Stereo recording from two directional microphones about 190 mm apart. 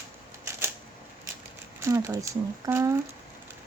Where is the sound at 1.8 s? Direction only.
15° right (ahead or behind).